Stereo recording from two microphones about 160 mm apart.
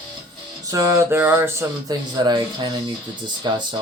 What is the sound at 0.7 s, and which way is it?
Speech, 20° right (ahead or behind).